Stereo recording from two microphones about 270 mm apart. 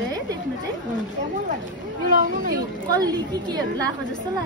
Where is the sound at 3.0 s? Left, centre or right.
Centre.